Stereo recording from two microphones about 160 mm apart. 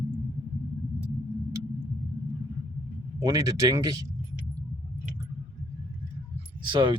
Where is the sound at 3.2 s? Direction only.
20° right (ahead or behind).